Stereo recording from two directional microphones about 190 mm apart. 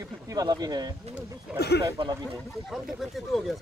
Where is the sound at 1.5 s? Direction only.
60° left (ahead or behind).